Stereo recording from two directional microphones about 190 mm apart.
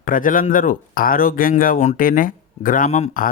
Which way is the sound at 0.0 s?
45° left (ahead or behind).